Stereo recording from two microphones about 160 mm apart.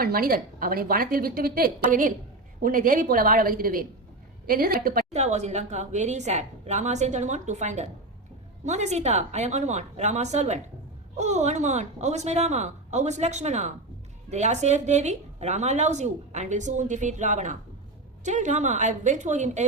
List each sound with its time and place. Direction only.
0.0 s a woman's voice: 65° right (ahead or behind)
5.1 s a woman's voice: 45° right (ahead or behind)